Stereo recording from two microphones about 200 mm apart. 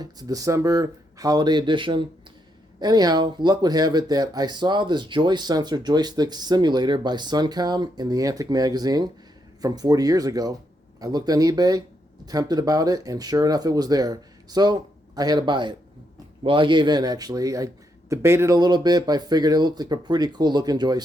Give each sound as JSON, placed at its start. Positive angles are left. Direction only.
{"t": 0.0, "sound": "speech", "side_deg": -20}